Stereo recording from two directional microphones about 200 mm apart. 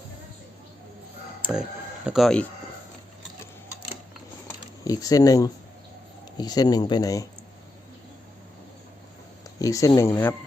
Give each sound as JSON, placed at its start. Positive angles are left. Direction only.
{"t": 1.4, "sound": "chicken", "side_deg": -5}
{"t": 2.0, "sound": "speech", "side_deg": 0}
{"t": 4.4, "sound": "a sound", "side_deg": 15}
{"t": 6.3, "sound": "speech", "side_deg": 20}
{"t": 9.6, "sound": "speech", "side_deg": 15}